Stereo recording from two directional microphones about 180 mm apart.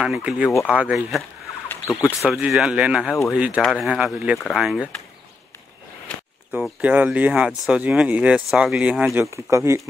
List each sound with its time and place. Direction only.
0.0 s speech: 5° right (ahead or behind)
2.2 s speech: centre (ahead or behind)
6.0 s speech: centre (ahead or behind)
9.2 s speech: 15° right (ahead or behind)